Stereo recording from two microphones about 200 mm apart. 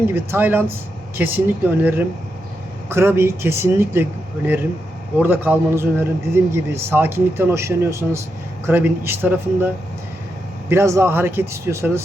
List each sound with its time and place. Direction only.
0.1 s a man's voice: 10° right (ahead or behind)
5.2 s a man's voice: 10° right (ahead or behind)